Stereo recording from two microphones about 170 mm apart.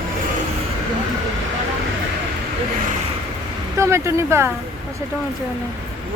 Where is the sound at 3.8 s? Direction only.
15° right (ahead or behind).